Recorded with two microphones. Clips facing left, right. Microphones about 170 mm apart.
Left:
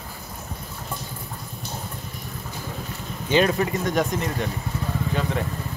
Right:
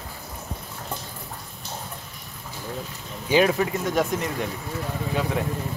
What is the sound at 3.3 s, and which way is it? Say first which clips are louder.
Speech: even; 5° right (ahead or behind).